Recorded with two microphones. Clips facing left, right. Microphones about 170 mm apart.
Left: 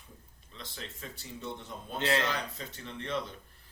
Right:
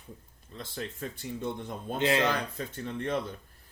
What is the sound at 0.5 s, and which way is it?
Speech, 50° right (ahead or behind).